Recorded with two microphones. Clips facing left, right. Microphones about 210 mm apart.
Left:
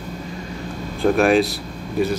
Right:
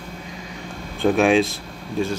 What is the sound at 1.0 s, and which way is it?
Speech, centre (ahead or behind).